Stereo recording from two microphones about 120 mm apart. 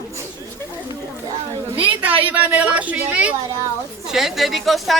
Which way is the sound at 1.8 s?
15° right (ahead or behind).